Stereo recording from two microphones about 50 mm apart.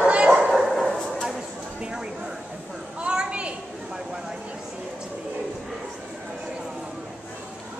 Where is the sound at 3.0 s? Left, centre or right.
Centre.